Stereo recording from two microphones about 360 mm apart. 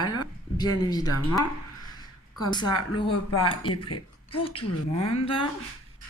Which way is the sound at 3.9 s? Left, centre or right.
Left.